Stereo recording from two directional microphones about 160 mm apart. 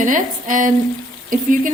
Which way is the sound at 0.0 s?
55° right (ahead or behind).